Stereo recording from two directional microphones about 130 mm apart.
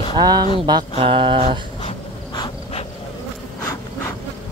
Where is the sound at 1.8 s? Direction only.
40° left (ahead or behind).